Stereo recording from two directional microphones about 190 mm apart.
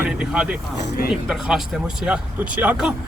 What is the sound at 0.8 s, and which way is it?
Speech, 55° left (ahead or behind).